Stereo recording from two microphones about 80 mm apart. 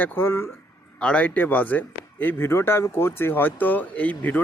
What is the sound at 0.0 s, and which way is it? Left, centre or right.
Speech, left.